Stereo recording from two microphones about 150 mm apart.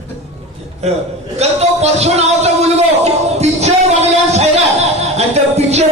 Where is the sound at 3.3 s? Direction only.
45° right (ahead or behind).